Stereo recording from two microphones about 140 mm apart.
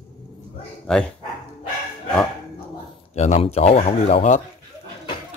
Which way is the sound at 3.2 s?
50° left (ahead or behind).